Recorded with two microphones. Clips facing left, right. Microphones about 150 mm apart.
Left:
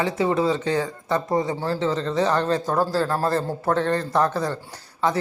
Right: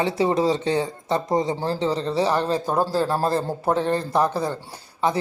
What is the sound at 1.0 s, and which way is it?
Speech, 15° right (ahead or behind).